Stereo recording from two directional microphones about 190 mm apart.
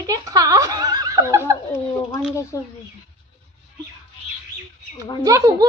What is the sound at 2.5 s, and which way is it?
Speech, 15° left (ahead or behind).